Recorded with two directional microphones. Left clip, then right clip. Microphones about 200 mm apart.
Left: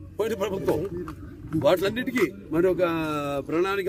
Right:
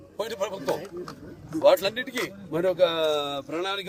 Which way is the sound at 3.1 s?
35° left (ahead or behind).